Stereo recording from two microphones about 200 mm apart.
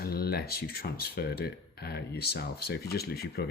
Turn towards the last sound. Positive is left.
turn(degrees=50)  # may be behind; listen again after turning